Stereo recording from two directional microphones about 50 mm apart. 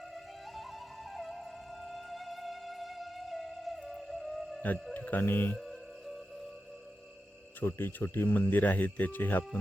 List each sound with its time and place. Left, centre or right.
0.1 s music: centre
4.9 s speech: left
5.2 s speech: left
5.5 s music: centre
7.6 s speech: left